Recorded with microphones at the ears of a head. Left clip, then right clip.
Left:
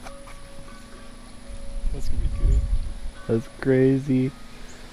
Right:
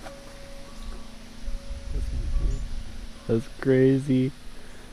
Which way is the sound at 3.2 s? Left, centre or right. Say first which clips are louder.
Left 1 dB; centre.